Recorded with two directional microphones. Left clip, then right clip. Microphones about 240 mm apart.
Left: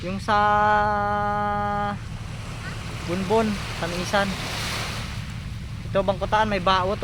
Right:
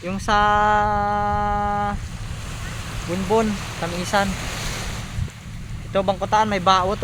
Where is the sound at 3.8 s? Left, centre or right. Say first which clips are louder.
Right 2 dB; centre.